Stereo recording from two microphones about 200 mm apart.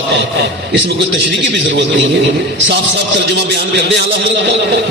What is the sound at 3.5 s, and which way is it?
A man's voice, 60° right (ahead or behind).